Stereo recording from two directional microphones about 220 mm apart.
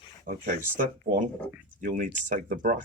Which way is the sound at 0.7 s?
35° right (ahead or behind).